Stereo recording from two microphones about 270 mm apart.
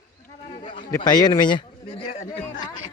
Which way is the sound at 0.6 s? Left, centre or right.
Centre.